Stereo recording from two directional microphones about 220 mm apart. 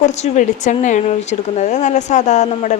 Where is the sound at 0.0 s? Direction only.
30° left (ahead or behind).